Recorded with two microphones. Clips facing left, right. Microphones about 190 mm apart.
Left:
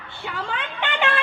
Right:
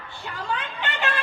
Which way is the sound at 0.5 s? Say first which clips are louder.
Right 1 dB; 70° left (ahead or behind).